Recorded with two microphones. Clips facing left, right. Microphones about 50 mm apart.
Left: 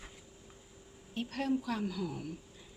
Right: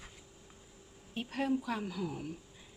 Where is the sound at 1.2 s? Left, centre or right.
Centre.